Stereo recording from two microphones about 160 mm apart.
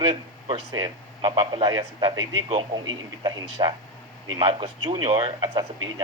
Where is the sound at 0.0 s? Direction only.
35° right (ahead or behind).